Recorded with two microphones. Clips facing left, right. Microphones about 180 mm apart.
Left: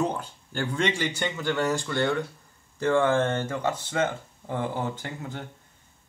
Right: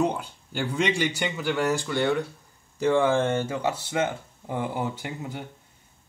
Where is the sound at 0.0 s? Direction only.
10° right (ahead or behind).